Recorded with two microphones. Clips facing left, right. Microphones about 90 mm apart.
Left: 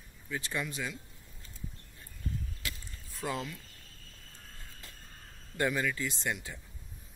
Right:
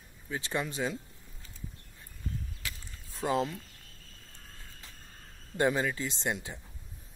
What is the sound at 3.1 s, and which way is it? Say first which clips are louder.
Speech: right 6 dB; 25° right (ahead or behind).